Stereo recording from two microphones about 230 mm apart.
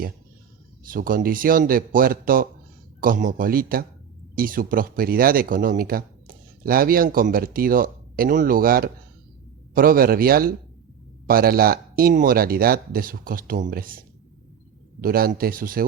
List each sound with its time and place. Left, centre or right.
0.9 s speech: right
15.0 s speech: right